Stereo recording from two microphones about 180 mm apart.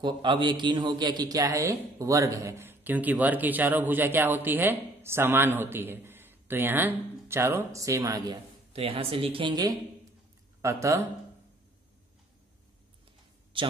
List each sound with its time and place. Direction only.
0.0 s a man's voice: 25° right (ahead or behind)
8.7 s a man's voice: 30° right (ahead or behind); by 11.1 s 15° right (ahead or behind)